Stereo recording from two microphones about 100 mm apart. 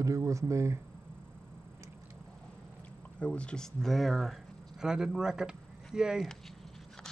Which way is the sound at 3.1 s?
10° left (ahead or behind).